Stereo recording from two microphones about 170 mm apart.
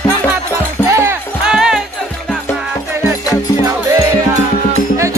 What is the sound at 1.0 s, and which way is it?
Music, 15° right (ahead or behind).